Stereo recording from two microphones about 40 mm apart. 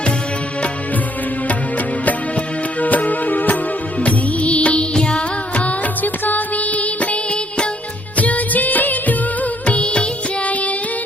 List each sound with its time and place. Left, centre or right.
2.8 s music: left
4.0 s music: left
5.5 s music: left
8.1 s music of bollywood: left
10.4 s child singing: left